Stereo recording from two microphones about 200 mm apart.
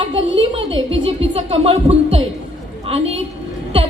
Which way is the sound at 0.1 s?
25° right (ahead or behind).